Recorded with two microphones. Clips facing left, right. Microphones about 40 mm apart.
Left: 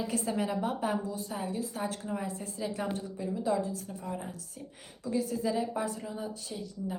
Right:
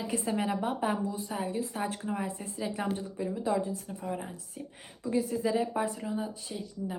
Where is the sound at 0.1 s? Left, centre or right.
Right.